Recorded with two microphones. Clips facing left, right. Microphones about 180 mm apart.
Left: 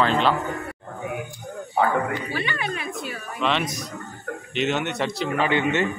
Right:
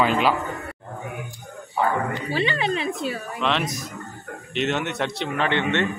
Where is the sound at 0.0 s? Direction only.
10° right (ahead or behind).